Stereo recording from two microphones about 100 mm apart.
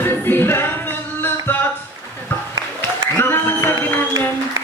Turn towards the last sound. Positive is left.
turn(degrees=20)  # may be behind; listen again after turning